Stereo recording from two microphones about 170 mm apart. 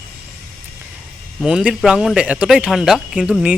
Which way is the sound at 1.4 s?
5° right (ahead or behind).